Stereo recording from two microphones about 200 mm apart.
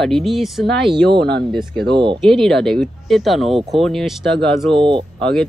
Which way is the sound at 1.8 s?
25° right (ahead or behind).